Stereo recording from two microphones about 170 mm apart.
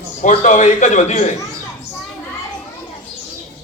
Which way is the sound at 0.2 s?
45° left (ahead or behind).